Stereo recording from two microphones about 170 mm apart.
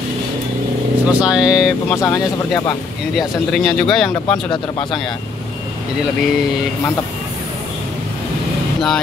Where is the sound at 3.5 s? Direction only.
5° left (ahead or behind).